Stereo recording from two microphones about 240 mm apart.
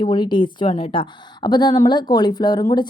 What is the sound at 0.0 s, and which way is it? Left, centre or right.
A woman's voice, centre.